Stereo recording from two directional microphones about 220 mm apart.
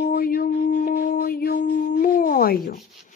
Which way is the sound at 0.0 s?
40° left (ahead or behind).